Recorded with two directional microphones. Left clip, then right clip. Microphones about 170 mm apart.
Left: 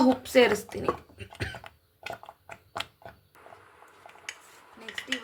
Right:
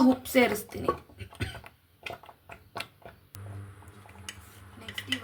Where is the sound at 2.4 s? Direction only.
60° left (ahead or behind).